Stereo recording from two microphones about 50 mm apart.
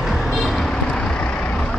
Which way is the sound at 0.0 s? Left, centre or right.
Centre.